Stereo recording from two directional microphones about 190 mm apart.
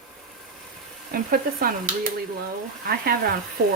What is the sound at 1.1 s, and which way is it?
Speech, 50° right (ahead or behind).